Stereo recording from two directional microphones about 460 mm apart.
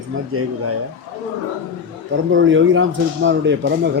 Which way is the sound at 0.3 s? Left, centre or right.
Right.